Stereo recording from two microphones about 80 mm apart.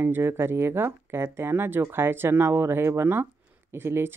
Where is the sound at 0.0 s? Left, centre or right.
Right.